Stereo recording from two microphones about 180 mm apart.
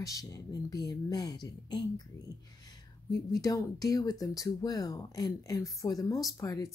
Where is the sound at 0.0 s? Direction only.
20° left (ahead or behind).